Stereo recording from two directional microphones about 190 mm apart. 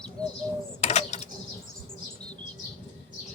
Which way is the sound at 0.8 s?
35° left (ahead or behind).